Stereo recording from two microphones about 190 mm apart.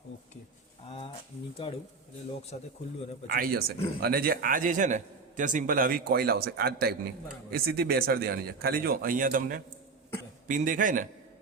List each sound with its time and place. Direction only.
0.9 s a sound: 30° left (ahead or behind)
1.6 s a man's voice: 25° left (ahead or behind)
3.2 s a man's voice: 50° right (ahead or behind)